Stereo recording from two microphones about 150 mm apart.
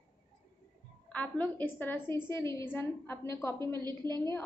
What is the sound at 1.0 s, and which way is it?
A woman's voice, 10° left (ahead or behind).